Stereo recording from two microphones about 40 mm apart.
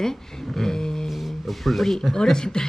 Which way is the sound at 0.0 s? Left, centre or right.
Centre.